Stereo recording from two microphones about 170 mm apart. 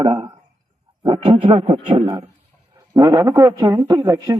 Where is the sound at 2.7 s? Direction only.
20° right (ahead or behind).